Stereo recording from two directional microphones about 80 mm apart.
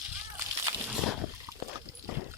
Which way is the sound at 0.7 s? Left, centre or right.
Right.